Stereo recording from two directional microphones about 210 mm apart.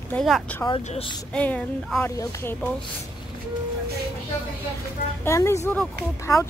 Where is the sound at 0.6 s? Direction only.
25° left (ahead or behind).